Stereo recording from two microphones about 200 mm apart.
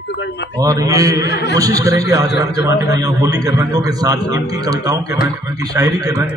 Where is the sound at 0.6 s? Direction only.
15° right (ahead or behind).